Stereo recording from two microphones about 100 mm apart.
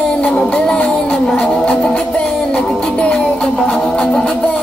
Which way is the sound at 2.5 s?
5° left (ahead or behind).